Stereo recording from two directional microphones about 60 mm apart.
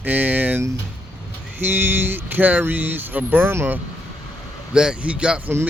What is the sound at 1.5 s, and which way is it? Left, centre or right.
Speech, right.